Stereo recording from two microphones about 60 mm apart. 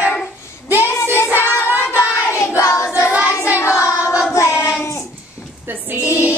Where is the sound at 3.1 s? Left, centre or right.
Right.